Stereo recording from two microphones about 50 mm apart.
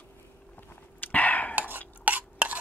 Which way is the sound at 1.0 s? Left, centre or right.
Left.